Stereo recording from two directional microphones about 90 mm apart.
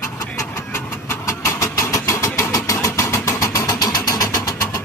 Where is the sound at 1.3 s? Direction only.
35° left (ahead or behind).